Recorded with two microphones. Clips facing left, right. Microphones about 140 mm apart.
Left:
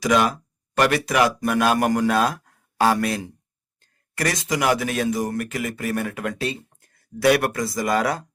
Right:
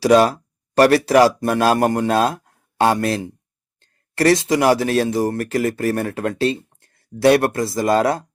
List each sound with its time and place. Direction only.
0.0 s a man's voice: 35° right (ahead or behind)